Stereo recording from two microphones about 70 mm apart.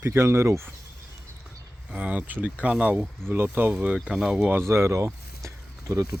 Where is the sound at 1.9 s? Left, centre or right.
Right.